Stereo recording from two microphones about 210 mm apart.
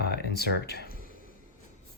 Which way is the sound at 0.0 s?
50° left (ahead or behind).